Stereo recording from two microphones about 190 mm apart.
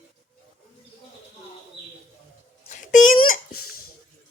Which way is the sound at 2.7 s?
40° left (ahead or behind).